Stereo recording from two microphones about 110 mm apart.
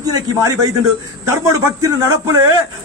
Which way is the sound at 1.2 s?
25° right (ahead or behind).